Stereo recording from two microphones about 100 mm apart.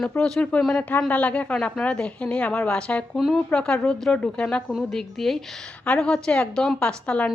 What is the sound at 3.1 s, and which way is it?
A woman's voice, centre (ahead or behind).